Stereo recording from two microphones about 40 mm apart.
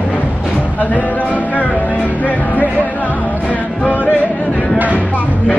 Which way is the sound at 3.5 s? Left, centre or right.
Left.